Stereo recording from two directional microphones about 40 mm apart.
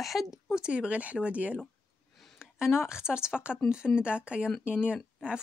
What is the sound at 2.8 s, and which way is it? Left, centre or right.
Speech, centre.